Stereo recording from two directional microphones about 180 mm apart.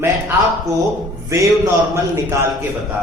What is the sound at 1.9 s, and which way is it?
Speech, 15° right (ahead or behind).